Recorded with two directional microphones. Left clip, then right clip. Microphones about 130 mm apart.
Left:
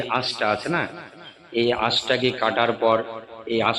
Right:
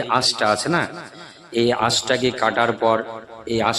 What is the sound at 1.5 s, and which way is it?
A man's voice, 75° right (ahead or behind).